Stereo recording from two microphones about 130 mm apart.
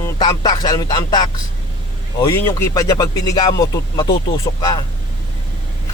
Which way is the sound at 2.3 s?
20° left (ahead or behind).